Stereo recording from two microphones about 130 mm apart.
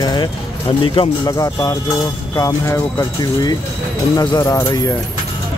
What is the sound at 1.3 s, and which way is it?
Speech, 25° left (ahead or behind).